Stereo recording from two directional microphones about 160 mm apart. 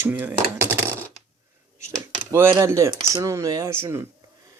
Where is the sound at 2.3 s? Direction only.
15° right (ahead or behind).